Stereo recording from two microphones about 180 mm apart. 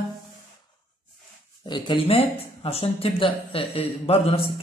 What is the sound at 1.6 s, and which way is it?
Speech, 25° left (ahead or behind).